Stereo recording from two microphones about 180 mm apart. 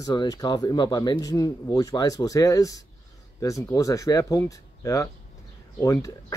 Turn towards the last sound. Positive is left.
turn(degrees=20)  # may be behind; listen again after turning